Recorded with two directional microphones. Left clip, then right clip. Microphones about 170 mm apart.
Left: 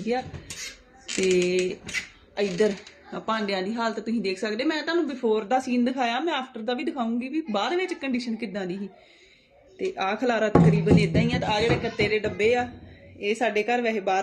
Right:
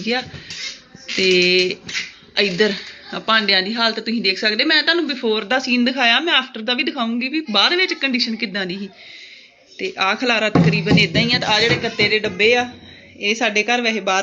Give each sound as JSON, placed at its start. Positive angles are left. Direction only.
{"t": 0.0, "sound": "speech", "side_deg": 15}
{"t": 1.4, "sound": "speech", "side_deg": 15}